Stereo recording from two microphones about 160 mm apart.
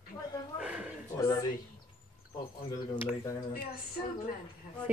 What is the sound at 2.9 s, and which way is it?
Speech, 20° left (ahead or behind).